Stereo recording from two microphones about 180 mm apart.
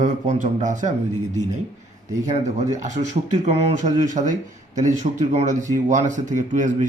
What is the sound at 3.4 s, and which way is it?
A man's voice, 45° right (ahead or behind).